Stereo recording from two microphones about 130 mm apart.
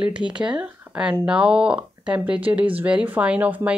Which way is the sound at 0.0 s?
10° right (ahead or behind).